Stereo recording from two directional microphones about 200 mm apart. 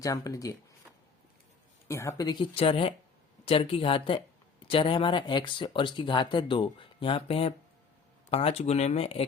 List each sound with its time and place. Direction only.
0.0 s speech: 15° left (ahead or behind)
1.9 s speech: 15° left (ahead or behind); by 9.2 s 30° left (ahead or behind)